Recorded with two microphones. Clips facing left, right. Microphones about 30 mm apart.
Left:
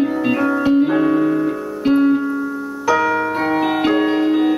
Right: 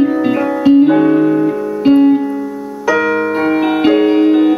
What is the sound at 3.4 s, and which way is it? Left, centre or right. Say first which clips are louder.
Music: right 6 dB; centre.